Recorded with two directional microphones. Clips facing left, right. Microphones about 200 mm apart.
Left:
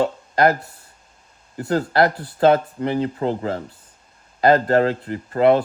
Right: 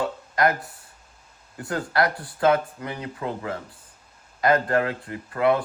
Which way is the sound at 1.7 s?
30° left (ahead or behind).